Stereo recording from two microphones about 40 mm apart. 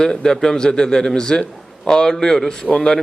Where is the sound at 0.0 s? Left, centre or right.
Centre.